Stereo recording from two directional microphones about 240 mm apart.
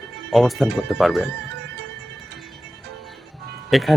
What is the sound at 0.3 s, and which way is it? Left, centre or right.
Speech, centre.